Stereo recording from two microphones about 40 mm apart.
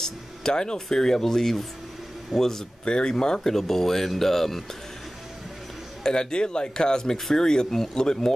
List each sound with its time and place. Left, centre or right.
0.0 s speech: centre
2.8 s speech: left; by 4.6 s centre
6.0 s speech: left